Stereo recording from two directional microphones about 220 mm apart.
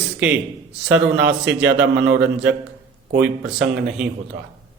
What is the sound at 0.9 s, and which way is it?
Speech, 5° right (ahead or behind).